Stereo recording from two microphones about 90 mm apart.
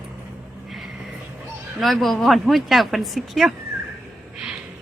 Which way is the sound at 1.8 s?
Centre (ahead or behind).